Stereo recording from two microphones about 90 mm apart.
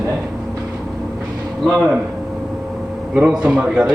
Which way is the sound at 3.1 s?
10° right (ahead or behind).